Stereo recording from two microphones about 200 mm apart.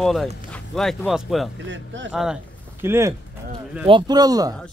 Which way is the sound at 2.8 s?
15° right (ahead or behind).